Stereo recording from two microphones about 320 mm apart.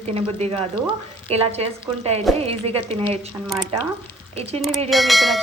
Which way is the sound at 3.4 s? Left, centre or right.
Centre.